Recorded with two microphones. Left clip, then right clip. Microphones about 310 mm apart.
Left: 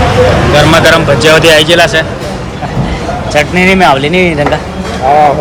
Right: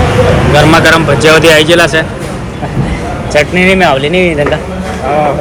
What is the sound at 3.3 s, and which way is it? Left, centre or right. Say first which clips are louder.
Speech: even; centre.